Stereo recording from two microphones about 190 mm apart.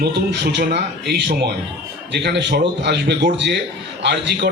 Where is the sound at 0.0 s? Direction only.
60° right (ahead or behind).